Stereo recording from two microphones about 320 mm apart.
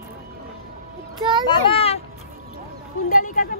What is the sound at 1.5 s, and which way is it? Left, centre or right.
Speech, centre.